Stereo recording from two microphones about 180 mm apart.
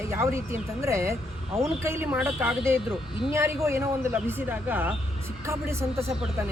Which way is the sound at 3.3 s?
15° right (ahead or behind).